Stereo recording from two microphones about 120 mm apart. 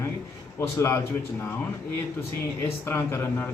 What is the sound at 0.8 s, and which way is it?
Speech, 20° left (ahead or behind).